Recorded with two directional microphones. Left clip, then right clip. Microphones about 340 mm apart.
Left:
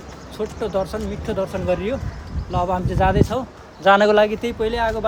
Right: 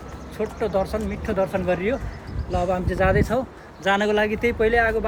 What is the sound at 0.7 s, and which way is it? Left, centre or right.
Speech, centre.